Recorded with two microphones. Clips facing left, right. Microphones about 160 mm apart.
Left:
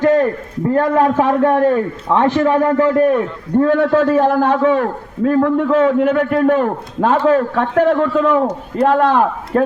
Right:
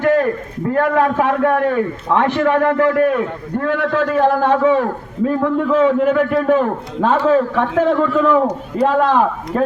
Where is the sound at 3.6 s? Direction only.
35° left (ahead or behind).